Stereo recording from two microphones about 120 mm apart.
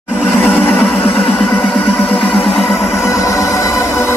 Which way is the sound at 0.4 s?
15° left (ahead or behind).